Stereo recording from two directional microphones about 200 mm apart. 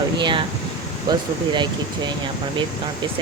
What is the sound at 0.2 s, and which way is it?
Speech, 25° right (ahead or behind).